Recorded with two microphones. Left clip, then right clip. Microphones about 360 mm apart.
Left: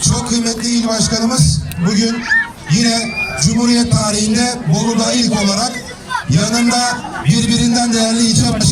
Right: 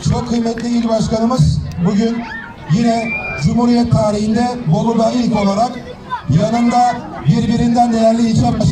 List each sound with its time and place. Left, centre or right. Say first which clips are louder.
0.0 s music: left 3 dB; centre
0.4 s a man's voice: left 1 dB; centre